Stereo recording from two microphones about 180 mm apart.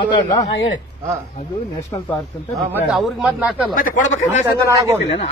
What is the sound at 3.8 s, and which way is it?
Speech, 45° left (ahead or behind).